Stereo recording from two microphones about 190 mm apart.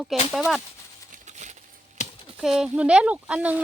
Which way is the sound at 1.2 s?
40° right (ahead or behind).